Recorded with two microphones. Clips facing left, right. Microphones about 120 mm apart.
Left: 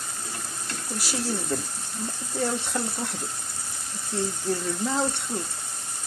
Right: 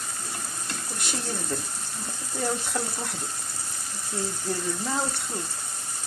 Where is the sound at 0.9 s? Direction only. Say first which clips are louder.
Left 5 dB; 5° left (ahead or behind).